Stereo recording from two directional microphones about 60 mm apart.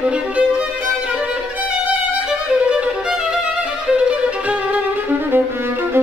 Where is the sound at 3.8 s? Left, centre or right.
Centre.